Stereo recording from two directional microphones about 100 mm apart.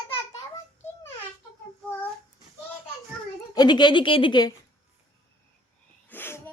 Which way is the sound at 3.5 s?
45° left (ahead or behind).